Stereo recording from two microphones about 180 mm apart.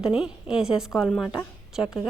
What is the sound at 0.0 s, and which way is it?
A woman's voice, 5° right (ahead or behind).